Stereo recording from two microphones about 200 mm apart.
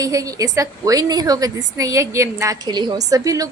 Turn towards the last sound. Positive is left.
turn(degrees=-15)  # may be behind; listen again after turning